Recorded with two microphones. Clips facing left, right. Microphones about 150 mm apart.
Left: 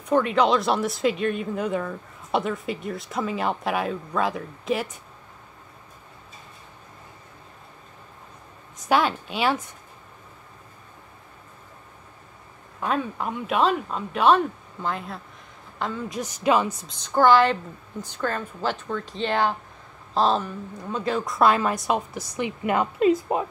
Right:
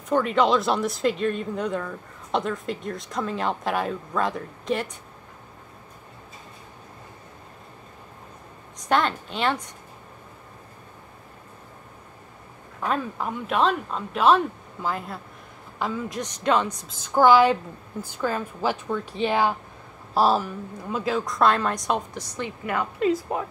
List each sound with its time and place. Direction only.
0.1 s speech: centre (ahead or behind)
8.8 s a woman's voice: 5° left (ahead or behind)
12.8 s speech: centre (ahead or behind)
22.7 s a woman's voice: 20° left (ahead or behind)